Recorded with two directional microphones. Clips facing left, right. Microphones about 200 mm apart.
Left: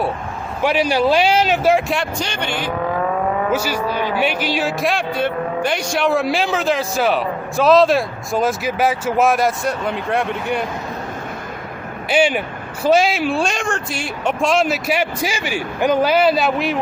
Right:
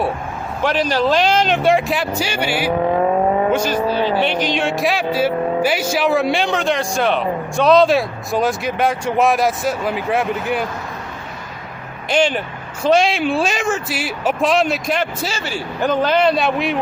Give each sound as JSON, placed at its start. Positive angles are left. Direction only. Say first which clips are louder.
{"t": 0.6, "sound": "a man's voice", "louder": "left 1 dB", "side_deg": 10}
{"t": 2.9, "sound": "vehicle", "louder": "right 3 dB", "side_deg": -30}
{"t": 3.5, "sound": "speech", "louder": "right 3 dB", "side_deg": 10}
{"t": 12.0, "sound": "a man's voice", "louder": "left 1 dB", "side_deg": 10}